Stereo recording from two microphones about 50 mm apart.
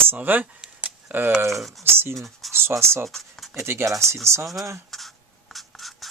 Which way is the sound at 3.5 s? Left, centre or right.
Right.